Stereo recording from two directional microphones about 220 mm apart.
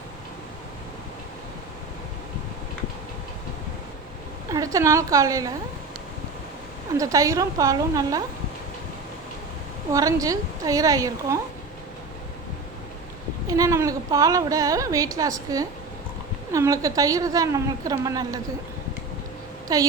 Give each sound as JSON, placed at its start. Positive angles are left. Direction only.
{"t": 4.5, "sound": "speech", "side_deg": -15}
{"t": 6.9, "sound": "speech", "side_deg": -15}
{"t": 9.9, "sound": "speech", "side_deg": -15}
{"t": 13.5, "sound": "speech", "side_deg": -15}
{"t": 19.6, "sound": "speech", "side_deg": -15}